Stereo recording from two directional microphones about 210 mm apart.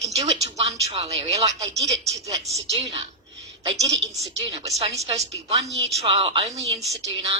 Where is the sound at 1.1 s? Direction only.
30° right (ahead or behind).